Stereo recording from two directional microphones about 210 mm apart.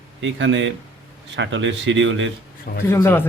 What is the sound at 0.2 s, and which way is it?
A man's voice, 65° right (ahead or behind).